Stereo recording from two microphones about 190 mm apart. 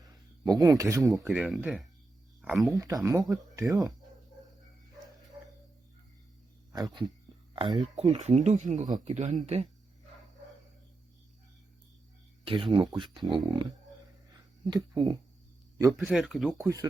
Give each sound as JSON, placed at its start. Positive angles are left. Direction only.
{"t": 0.0, "sound": "a sound", "side_deg": -20}
{"t": 1.3, "sound": "speech", "side_deg": -5}
{"t": 2.7, "sound": "speech", "side_deg": -20}
{"t": 6.7, "sound": "speech", "side_deg": -20}
{"t": 8.8, "sound": "speech", "side_deg": -20}
{"t": 9.1, "sound": "speech", "side_deg": -40}
{"t": 12.5, "sound": "speech", "side_deg": -25}
{"t": 16.0, "sound": "speech", "side_deg": 0}
{"t": 16.6, "sound": "speech", "side_deg": -20}